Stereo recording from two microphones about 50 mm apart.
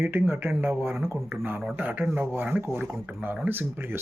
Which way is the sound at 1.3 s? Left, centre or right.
Right.